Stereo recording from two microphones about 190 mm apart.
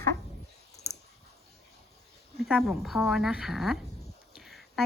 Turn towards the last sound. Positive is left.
turn(degrees=0)  # may be behind; listen again after turning